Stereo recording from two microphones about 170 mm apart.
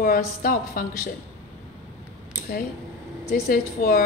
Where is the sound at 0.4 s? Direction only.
55° left (ahead or behind).